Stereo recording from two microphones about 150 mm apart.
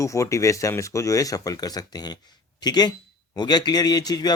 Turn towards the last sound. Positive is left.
turn(degrees=25)  # may be behind; listen again after turning